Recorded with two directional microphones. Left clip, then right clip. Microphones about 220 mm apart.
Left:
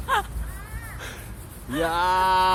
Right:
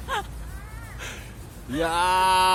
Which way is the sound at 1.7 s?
Centre (ahead or behind).